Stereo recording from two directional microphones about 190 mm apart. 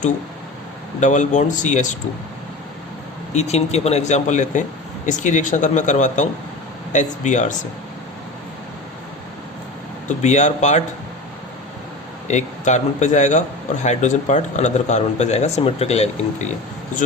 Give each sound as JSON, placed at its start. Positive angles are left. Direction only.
{"t": 0.9, "sound": "speech", "side_deg": 40}
{"t": 3.3, "sound": "speech", "side_deg": 35}
{"t": 10.1, "sound": "speech", "side_deg": 40}
{"t": 12.3, "sound": "speech", "side_deg": 40}